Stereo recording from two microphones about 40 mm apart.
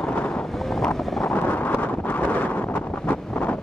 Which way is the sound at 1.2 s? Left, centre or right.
Left.